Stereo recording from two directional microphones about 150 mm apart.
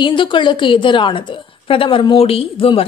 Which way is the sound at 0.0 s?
35° left (ahead or behind).